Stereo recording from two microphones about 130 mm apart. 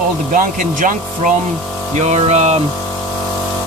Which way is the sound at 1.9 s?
60° right (ahead or behind).